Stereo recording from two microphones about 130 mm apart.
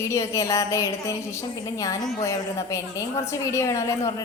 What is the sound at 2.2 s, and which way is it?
A woman's voice, 25° left (ahead or behind).